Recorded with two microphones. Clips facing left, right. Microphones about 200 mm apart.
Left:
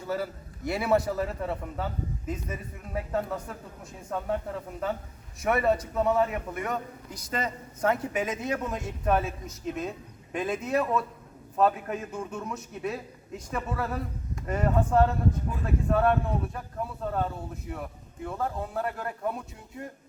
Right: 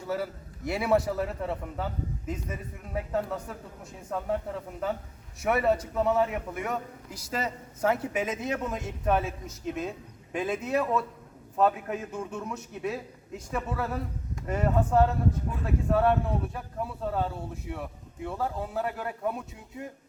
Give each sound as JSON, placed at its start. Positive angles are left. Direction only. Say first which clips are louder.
{"t": 0.1, "sound": "a man's voice", "louder": "even", "side_deg": 0}